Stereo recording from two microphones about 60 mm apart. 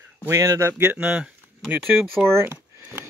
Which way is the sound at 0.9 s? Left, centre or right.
Centre.